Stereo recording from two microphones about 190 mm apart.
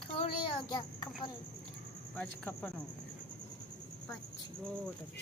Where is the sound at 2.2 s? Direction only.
5° left (ahead or behind).